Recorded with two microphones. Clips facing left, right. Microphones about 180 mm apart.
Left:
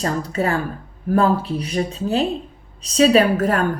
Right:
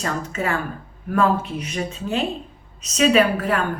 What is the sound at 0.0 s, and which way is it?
A woman's voice, 35° left (ahead or behind).